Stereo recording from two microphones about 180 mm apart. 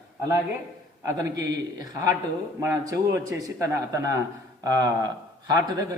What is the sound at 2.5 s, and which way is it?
A man's voice, 15° right (ahead or behind).